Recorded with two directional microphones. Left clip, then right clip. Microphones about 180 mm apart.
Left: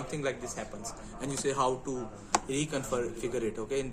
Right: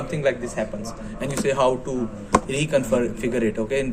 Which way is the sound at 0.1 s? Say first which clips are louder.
Right 12 dB; 40° left (ahead or behind).